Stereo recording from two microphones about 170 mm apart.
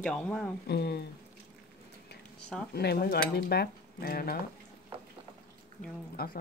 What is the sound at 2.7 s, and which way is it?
Cutlery, 70° left (ahead or behind).